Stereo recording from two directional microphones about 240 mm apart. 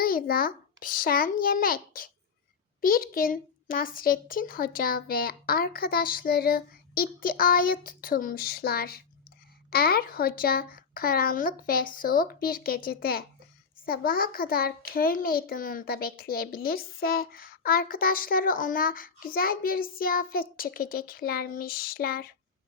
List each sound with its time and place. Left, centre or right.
0.0 s a child's voice: left